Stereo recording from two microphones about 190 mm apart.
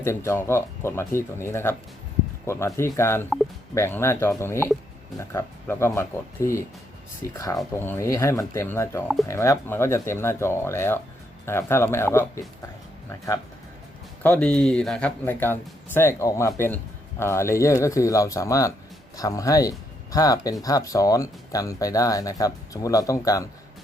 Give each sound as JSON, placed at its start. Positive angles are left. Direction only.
{"t": 0.0, "sound": "speech", "side_deg": 15}